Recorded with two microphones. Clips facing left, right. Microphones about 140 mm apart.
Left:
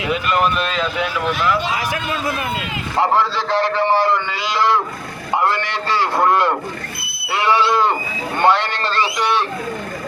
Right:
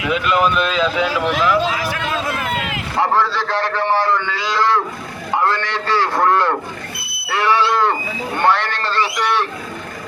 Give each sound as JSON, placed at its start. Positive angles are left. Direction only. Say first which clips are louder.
{"t": 0.1, "sound": "speech", "louder": "right 2 dB", "side_deg": 0}
{"t": 1.0, "sound": "speech", "louder": "right 3 dB", "side_deg": -90}
{"t": 3.0, "sound": "a man's voice", "louder": "even", "side_deg": 15}
{"t": 5.4, "sound": "a sound", "louder": "right 1 dB", "side_deg": 15}
{"t": 8.4, "sound": "a man's voice", "louder": "left 1 dB", "side_deg": 15}